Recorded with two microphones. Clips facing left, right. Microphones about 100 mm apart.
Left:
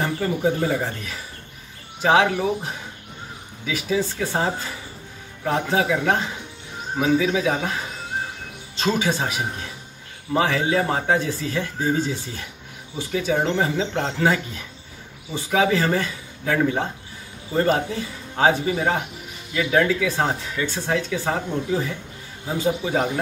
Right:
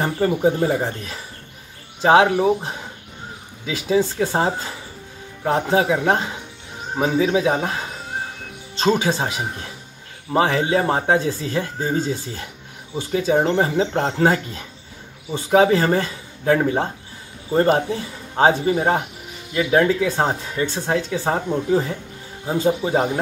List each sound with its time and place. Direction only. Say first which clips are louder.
0.0 s speech: right 4 dB; 30° right (ahead or behind)
8.7 s speech: right 3 dB; 30° right (ahead or behind)
10.3 s speech: right 2 dB; 35° right (ahead or behind)